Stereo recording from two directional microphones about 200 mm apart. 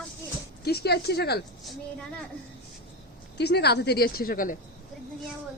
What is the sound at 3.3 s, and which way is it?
Speech, 55° left (ahead or behind).